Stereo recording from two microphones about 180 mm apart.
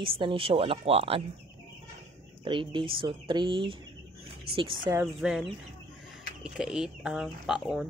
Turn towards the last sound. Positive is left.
turn(degrees=-5)  # may be behind; listen again after turning